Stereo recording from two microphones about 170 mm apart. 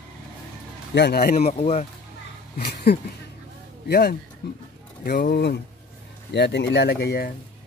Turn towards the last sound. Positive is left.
turn(degrees=65)  # may be behind; listen again after turning